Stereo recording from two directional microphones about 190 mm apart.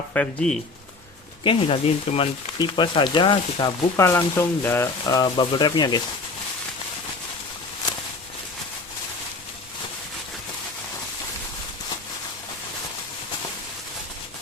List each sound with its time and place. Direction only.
0.1 s speech: 5° left (ahead or behind)
1.5 s speech: 30° left (ahead or behind)
3.9 s speech: 15° left (ahead or behind)